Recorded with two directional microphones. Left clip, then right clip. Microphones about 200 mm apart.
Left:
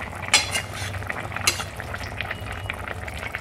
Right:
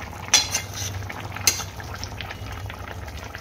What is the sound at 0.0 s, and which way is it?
Stir, 10° left (ahead or behind).